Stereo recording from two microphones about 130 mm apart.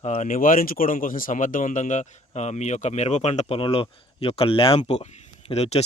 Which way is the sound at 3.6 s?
45° left (ahead or behind).